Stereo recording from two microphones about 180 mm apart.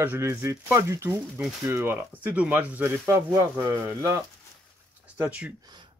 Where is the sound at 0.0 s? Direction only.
15° right (ahead or behind).